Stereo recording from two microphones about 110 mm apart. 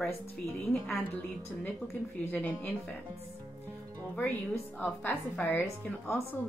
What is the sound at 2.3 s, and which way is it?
Speech, 10° left (ahead or behind).